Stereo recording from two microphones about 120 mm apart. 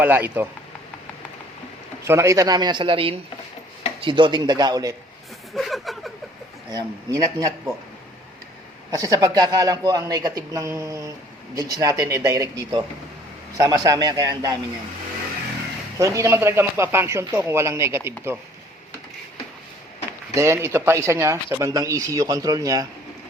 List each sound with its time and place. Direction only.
0.0 s speech: 15° right (ahead or behind)
2.0 s speech: 25° right (ahead or behind)
5.5 s a sound: centre (ahead or behind)
6.7 s speech: 30° right (ahead or behind)
9.0 s speech: 30° right (ahead or behind)
16.0 s speech: 25° right (ahead or behind)
20.3 s speech: 25° right (ahead or behind)